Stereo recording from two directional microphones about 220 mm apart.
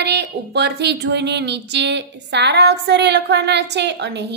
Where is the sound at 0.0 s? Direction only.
50° right (ahead or behind).